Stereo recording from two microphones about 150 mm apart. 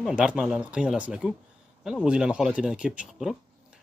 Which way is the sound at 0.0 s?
5° right (ahead or behind).